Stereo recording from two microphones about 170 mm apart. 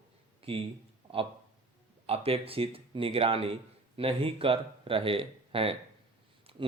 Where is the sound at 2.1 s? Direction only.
35° right (ahead or behind).